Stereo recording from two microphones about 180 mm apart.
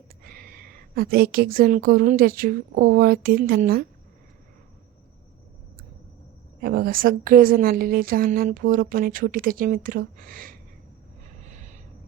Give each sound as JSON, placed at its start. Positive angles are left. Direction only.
{"t": 0.3, "sound": "a woman's voice", "side_deg": -55}
{"t": 6.6, "sound": "a woman's voice", "side_deg": -55}
{"t": 11.4, "sound": "a sound", "side_deg": -40}